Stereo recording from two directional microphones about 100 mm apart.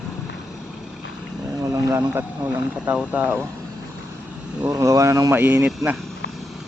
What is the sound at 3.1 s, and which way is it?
Speech, 15° right (ahead or behind).